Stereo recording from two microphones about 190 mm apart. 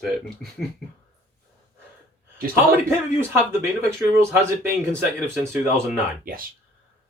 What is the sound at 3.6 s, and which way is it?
Speech, 15° right (ahead or behind).